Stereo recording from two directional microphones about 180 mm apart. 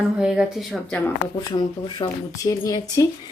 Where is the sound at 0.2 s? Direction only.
5° right (ahead or behind).